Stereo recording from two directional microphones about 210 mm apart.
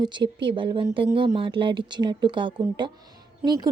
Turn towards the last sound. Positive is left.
turn(degrees=-20)  # may be behind; listen again after turning